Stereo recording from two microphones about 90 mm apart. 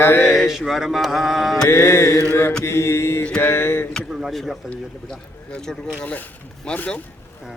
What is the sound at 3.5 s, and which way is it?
Mantra, 25° left (ahead or behind).